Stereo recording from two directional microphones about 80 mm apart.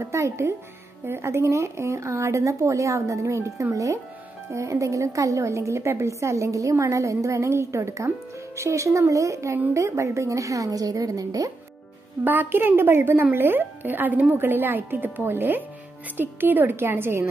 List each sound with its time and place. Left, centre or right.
0.0 s a woman's voice: right
12.3 s a woman's voice: right